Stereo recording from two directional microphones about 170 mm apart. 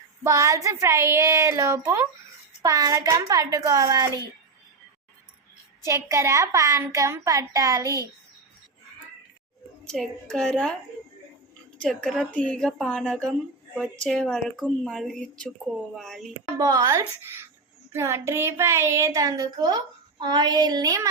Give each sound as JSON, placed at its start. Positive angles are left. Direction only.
{"t": 0.2, "sound": "a woman's voice", "side_deg": -20}
{"t": 5.8, "sound": "a woman's voice", "side_deg": -15}
{"t": 9.8, "sound": "a woman's voice", "side_deg": 5}
{"t": 11.8, "sound": "a woman's voice", "side_deg": 5}
{"t": 16.6, "sound": "a child's voice", "side_deg": -20}